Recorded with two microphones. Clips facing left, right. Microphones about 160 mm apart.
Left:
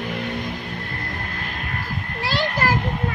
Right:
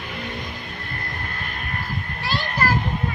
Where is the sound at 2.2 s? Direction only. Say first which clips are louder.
Left 2 dB; 90° left.